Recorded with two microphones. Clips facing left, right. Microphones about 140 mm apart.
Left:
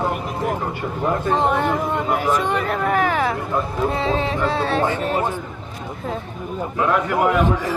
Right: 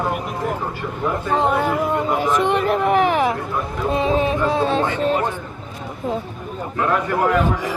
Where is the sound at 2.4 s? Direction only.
20° right (ahead or behind).